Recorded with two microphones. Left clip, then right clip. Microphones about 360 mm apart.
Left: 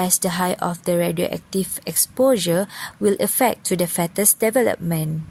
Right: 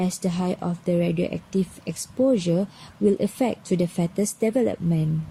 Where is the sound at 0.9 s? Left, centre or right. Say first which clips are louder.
Left 3 dB; left.